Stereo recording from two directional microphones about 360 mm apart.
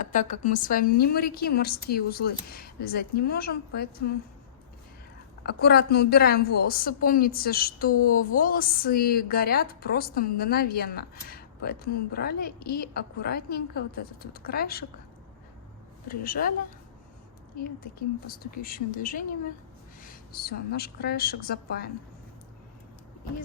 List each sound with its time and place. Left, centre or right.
0.0 s a woman's voice: left
5.4 s a woman's voice: left
16.0 s a woman's voice: left
18.3 s a woman's voice: left